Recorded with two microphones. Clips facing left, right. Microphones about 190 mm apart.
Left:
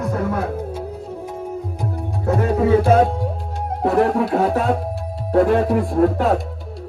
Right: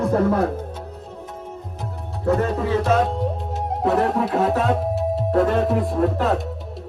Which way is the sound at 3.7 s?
Centre (ahead or behind).